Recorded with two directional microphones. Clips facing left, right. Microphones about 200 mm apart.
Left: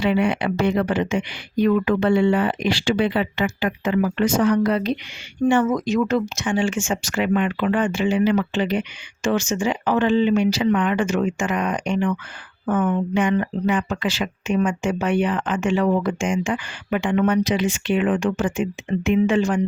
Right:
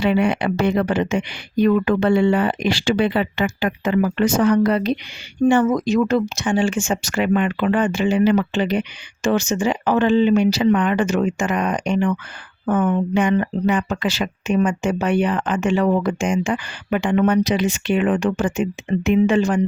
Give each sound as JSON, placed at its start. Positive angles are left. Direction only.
{"t": 0.0, "sound": "speech", "side_deg": -45}